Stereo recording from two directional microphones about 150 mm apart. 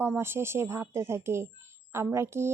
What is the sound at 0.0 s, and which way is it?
Speech, 15° right (ahead or behind).